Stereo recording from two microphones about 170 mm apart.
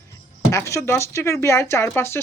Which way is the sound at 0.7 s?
15° left (ahead or behind).